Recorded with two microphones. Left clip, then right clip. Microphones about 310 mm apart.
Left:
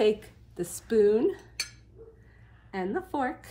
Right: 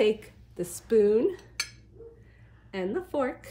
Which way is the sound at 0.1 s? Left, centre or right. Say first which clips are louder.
Even; centre.